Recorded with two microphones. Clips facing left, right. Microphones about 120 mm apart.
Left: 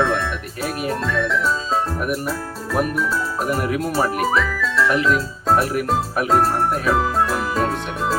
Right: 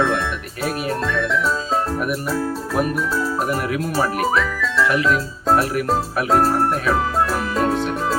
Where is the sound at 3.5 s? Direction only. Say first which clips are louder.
Left 1 dB; centre (ahead or behind).